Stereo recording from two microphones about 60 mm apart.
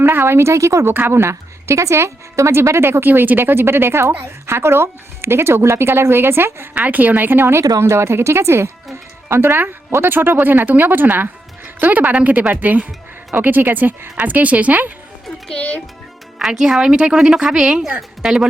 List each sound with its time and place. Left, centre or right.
0.0 s speech: right
0.9 s speech: right
3.1 s speech: right
6.7 s speech: right
7.8 s speech: right
9.3 s speech: right
15.4 s a child's voice: left
16.5 s a woman's voice: centre